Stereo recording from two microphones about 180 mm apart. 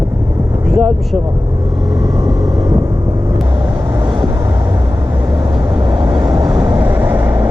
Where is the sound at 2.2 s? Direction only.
20° right (ahead or behind).